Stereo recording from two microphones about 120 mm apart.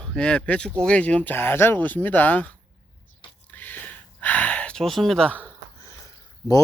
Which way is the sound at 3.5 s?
15° left (ahead or behind).